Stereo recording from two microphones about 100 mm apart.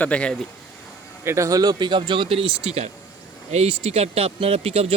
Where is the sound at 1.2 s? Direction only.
30° right (ahead or behind).